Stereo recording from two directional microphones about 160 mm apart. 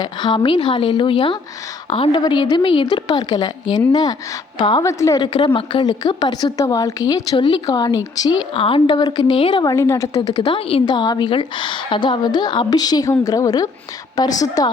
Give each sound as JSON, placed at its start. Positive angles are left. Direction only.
{"t": 0.0, "sound": "a woman's voice", "side_deg": 25}
{"t": 9.7, "sound": "a woman's voice", "side_deg": 20}